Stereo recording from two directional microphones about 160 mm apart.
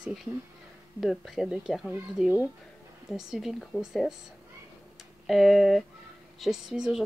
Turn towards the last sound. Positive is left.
turn(degrees=0)  # may be behind; listen again after turning